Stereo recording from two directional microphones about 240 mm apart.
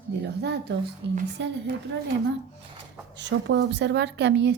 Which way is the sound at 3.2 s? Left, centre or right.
Right.